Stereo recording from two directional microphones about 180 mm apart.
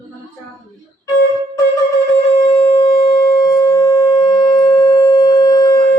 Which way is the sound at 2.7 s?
20° left (ahead or behind).